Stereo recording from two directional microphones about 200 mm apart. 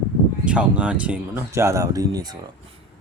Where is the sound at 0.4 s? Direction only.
5° right (ahead or behind).